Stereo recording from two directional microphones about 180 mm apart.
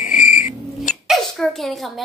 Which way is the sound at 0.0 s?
45° left (ahead or behind).